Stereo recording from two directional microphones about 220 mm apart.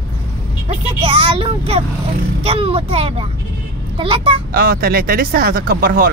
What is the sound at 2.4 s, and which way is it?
Speech, 25° right (ahead or behind).